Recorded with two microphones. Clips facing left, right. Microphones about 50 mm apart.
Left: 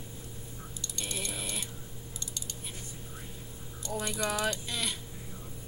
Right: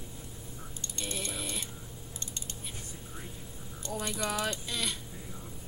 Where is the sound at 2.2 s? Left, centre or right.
Right.